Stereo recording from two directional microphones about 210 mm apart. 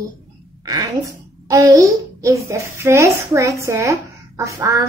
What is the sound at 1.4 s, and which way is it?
A child's voice, 15° right (ahead or behind).